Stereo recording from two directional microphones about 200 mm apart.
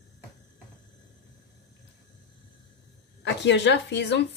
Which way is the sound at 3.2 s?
60° left (ahead or behind).